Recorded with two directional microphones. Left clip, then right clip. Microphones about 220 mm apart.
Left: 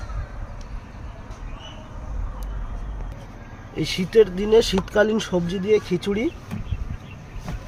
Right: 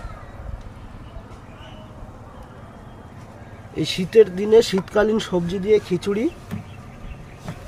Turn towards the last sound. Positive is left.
turn(degrees=-20)  # may be behind; listen again after turning